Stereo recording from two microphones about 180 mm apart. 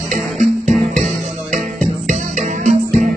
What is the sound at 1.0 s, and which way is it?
Music, 40° right (ahead or behind).